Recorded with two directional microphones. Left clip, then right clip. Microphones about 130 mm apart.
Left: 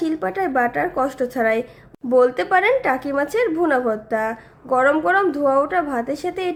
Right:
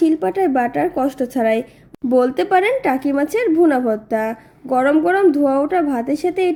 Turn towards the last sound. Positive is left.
turn(degrees=-20)  # may be behind; listen again after turning